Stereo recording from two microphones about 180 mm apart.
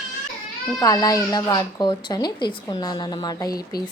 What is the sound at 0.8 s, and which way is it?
Speech, 20° left (ahead or behind).